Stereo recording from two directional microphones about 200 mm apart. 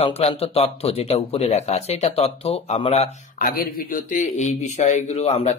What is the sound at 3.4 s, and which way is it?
Speech, 45° left (ahead or behind).